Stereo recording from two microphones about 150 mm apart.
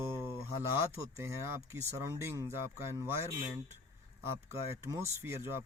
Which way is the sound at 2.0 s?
20° right (ahead or behind).